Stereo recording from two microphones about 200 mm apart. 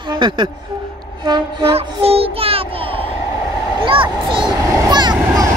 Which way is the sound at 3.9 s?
25° right (ahead or behind).